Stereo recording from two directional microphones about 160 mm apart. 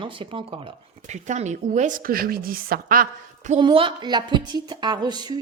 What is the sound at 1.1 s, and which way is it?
A woman's voice, 45° right (ahead or behind).